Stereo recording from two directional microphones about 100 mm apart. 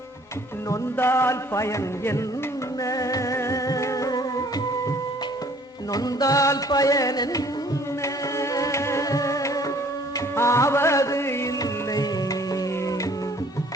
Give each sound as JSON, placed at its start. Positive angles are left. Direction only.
{"t": 0.7, "sound": "music", "side_deg": 25}
{"t": 5.9, "sound": "music", "side_deg": 40}
{"t": 11.6, "sound": "music", "side_deg": 35}